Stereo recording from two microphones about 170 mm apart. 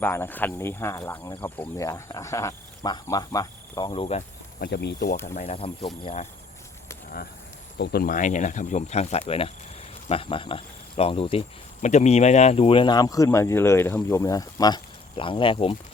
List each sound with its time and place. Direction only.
0.0 s speech: 15° left (ahead or behind)
3.9 s speech: 40° left (ahead or behind)
4.6 s speech: 75° left (ahead or behind)
5.2 s speech: 45° left (ahead or behind)
7.8 s speech: 60° left (ahead or behind); by 15.7 s 30° left (ahead or behind)